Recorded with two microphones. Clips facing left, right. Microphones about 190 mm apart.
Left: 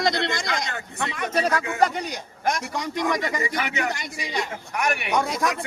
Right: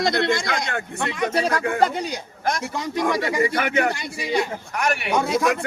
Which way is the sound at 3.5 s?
55° right (ahead or behind).